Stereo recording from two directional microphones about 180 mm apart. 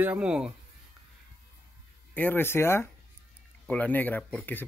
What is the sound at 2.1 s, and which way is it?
Speech, 10° left (ahead or behind).